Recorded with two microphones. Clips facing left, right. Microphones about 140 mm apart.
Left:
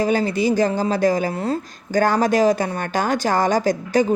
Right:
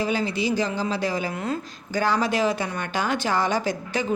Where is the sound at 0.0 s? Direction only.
45° left (ahead or behind).